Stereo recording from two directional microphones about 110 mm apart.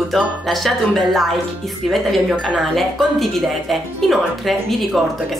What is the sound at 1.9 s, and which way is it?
A woman's voice, centre (ahead or behind).